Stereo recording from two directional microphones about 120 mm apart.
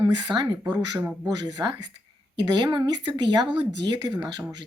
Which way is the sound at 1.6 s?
25° right (ahead or behind).